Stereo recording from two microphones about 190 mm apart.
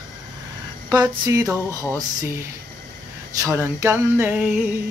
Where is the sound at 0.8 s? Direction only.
20° right (ahead or behind).